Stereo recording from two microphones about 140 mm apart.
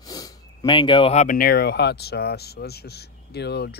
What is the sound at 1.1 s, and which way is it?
Speech, 80° left.